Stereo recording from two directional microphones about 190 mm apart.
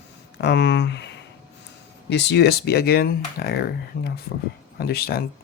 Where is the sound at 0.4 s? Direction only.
65° left (ahead or behind).